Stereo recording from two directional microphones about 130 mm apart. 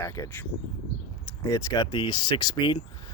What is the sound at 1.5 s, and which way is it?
Speech, 25° left (ahead or behind).